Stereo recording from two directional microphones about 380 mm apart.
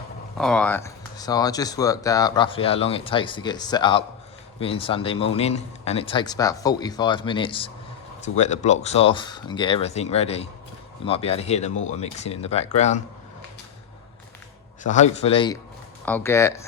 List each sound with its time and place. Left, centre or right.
0.3 s speech: centre
14.8 s speech: centre